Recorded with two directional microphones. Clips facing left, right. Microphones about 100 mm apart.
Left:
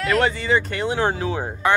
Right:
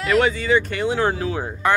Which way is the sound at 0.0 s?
5° right (ahead or behind).